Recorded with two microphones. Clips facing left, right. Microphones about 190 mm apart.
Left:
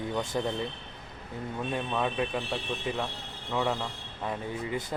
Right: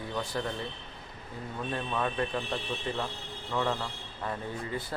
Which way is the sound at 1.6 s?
15° left (ahead or behind).